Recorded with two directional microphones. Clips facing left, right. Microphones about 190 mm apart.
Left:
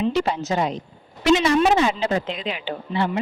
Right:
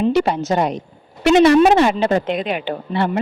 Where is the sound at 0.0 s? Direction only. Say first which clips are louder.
Right 5 dB; 60° right (ahead or behind).